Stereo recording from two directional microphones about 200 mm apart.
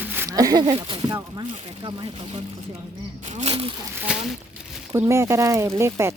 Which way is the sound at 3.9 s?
5° right (ahead or behind).